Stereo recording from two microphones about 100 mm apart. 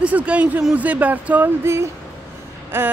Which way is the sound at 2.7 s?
25° right (ahead or behind).